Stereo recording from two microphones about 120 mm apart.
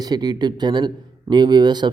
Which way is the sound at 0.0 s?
35° right (ahead or behind).